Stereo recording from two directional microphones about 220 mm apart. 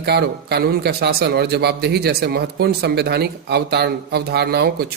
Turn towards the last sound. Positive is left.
turn(degrees=-45)  # may be behind; listen again after turning